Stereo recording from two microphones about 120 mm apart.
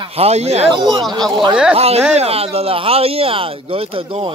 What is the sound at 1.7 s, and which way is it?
Speech, 60° right (ahead or behind).